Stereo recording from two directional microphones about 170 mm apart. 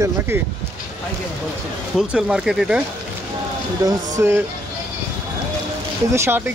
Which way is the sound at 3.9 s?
15° right (ahead or behind).